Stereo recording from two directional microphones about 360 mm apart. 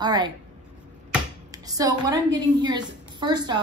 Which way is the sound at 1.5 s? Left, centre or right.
Centre.